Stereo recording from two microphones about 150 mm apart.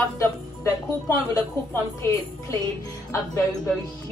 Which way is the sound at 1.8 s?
15° left (ahead or behind).